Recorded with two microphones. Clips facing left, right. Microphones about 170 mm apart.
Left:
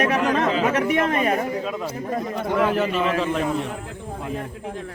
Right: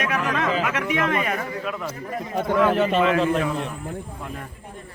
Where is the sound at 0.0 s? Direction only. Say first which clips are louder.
Left 4 dB; 35° left (ahead or behind).